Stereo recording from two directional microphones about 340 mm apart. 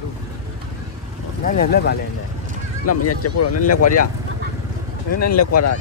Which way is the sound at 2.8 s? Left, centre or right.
Left.